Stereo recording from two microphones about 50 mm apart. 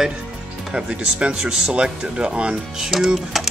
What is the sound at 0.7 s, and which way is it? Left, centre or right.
Speech, centre.